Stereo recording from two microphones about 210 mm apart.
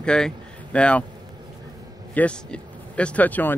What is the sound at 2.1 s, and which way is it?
Speech, 5° left (ahead or behind).